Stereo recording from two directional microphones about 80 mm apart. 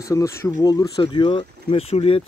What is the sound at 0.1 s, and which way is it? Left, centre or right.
Speech, left.